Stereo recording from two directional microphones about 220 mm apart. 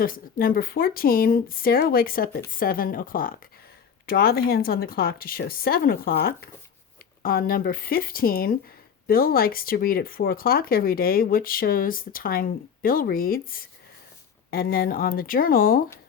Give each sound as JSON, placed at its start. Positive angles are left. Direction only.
{"t": 0.0, "sound": "a woman's voice", "side_deg": 40}